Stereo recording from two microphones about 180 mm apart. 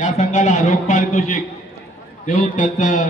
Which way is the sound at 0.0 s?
40° left (ahead or behind).